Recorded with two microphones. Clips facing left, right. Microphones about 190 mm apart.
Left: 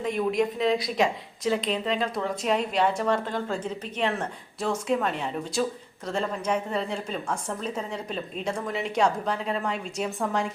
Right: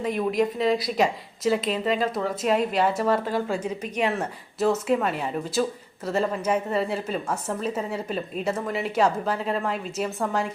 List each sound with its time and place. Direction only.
0.0 s a woman's voice: centre (ahead or behind)